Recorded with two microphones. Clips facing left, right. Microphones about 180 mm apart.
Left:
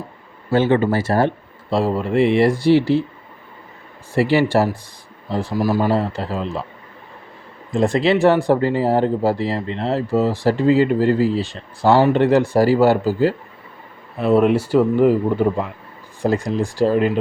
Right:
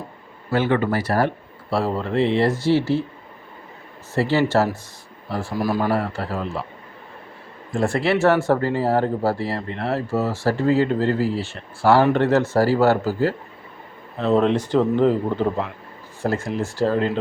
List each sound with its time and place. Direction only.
0.5 s speech: 25° left (ahead or behind)
1.7 s speech: 15° left (ahead or behind)
4.1 s speech: 15° left (ahead or behind)
7.7 s speech: 20° left (ahead or behind)